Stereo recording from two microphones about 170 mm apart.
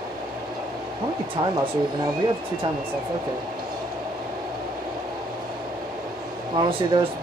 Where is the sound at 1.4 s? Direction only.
20° right (ahead or behind).